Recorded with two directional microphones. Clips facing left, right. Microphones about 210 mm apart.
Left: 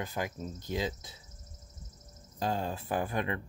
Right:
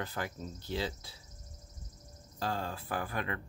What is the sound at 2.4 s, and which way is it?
Speech, 20° left (ahead or behind).